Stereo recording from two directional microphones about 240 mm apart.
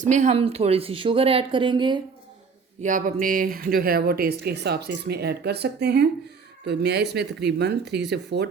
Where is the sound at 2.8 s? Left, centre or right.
Right.